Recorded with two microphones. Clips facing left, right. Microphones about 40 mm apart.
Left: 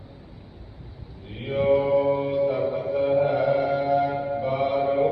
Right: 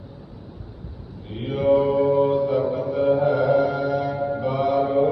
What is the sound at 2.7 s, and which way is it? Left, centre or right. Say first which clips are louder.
Music: right 2 dB; left.